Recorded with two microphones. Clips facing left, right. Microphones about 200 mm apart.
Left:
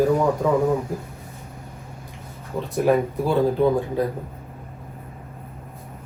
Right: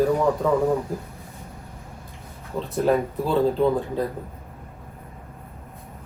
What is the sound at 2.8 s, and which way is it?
Speech, 10° left (ahead or behind).